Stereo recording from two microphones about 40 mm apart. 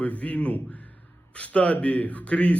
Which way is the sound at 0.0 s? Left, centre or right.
Left.